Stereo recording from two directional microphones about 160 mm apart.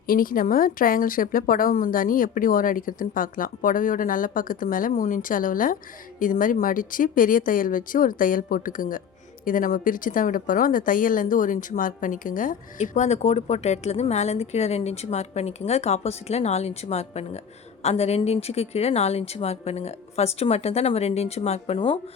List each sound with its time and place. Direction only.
0.1 s a woman's voice: 60° left (ahead or behind); by 21.9 s 35° left (ahead or behind)